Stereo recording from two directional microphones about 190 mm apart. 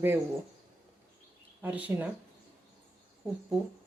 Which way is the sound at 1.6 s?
10° right (ahead or behind).